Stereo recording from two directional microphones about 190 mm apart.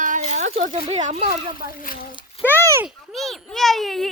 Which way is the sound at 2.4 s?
30° left (ahead or behind).